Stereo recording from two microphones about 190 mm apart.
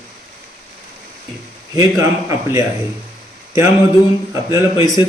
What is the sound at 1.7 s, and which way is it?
Speech, 15° right (ahead or behind).